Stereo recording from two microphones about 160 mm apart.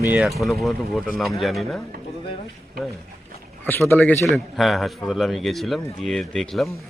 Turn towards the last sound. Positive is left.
turn(degrees=0)  # may be behind; listen again after turning